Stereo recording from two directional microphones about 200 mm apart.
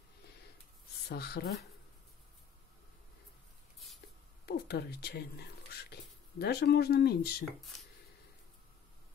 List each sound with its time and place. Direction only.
1.0 s speech: 55° left (ahead or behind)
4.5 s speech: 55° left (ahead or behind)